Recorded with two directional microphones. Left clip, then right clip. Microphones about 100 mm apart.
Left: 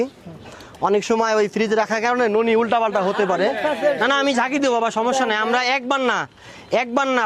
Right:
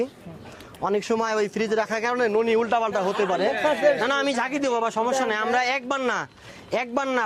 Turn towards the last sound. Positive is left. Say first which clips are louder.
# left 5 dB
turn(degrees=40)  # may be behind; listen again after turning